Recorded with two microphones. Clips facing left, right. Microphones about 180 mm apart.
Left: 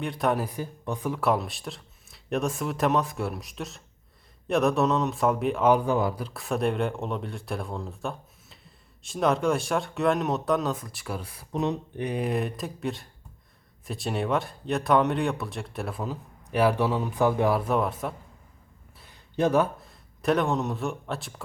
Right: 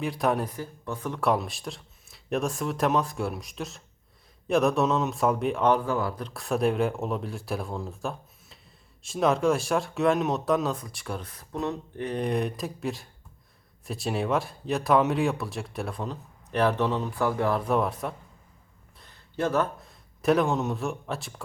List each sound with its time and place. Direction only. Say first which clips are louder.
0.0 s speech: even; centre (ahead or behind)
0.5 s speech: left 2 dB; 15° left (ahead or behind)
1.1 s speech: right 1 dB; centre (ahead or behind)
5.7 s speech: left 3 dB; 20° left (ahead or behind)
6.1 s speech: right 1 dB; 5° left (ahead or behind)
17.7 s speech: even; centre (ahead or behind)
18.9 s a sound: left 4 dB; 10° left (ahead or behind)
19.8 s a man's voice: right 2 dB; centre (ahead or behind)